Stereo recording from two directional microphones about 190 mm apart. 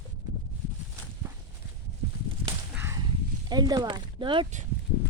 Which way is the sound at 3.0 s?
20° right (ahead or behind).